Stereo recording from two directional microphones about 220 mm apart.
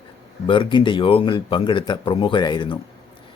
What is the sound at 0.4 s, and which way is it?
Speech, 25° left (ahead or behind).